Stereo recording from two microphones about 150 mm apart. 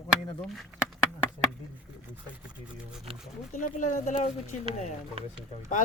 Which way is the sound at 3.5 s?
60° left (ahead or behind).